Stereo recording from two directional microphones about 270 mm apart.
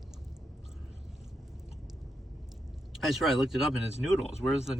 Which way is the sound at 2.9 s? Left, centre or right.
Centre.